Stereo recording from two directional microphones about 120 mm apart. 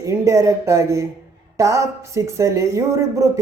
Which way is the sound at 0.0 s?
25° right (ahead or behind).